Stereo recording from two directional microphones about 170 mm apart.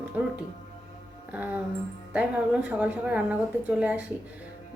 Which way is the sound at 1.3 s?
10° right (ahead or behind).